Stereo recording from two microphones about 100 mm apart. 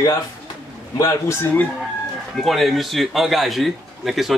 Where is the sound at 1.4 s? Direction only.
15° left (ahead or behind).